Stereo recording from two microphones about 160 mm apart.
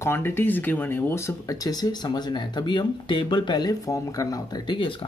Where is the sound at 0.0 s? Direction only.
15° left (ahead or behind).